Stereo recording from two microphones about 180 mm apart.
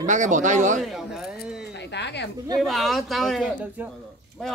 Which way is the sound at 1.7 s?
70° left (ahead or behind).